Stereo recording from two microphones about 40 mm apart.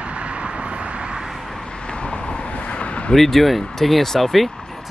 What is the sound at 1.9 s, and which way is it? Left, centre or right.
Vehicle, left.